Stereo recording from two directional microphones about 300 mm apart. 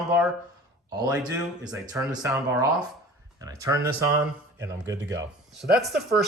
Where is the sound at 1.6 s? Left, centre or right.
Centre.